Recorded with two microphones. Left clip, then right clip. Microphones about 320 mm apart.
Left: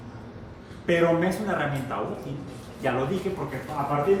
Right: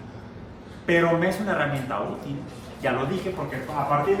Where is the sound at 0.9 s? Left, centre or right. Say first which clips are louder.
Right 1 dB; centre.